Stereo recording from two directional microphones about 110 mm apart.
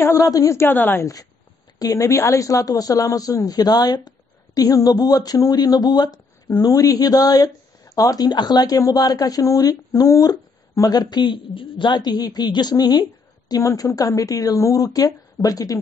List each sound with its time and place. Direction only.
0.0 s a woman's voice: 30° left (ahead or behind)
1.8 s speech: 30° left (ahead or behind)